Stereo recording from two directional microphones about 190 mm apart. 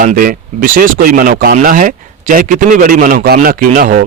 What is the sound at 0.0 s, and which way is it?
Speech, 45° right (ahead or behind).